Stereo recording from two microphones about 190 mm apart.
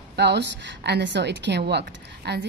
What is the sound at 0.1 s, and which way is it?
A woman's voice, 60° right (ahead or behind).